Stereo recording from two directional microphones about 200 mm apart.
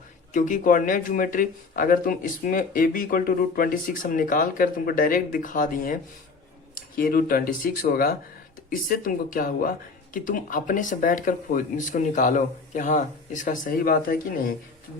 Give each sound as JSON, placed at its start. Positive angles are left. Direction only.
{"t": 0.3, "sound": "speech", "side_deg": 40}